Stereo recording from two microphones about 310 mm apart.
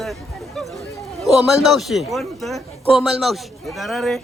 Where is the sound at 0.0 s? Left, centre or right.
Centre.